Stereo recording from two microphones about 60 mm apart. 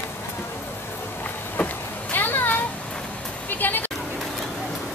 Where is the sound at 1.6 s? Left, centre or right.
Left.